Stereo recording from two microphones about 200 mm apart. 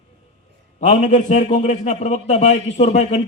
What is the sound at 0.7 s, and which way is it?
A man's voice, 35° left (ahead or behind).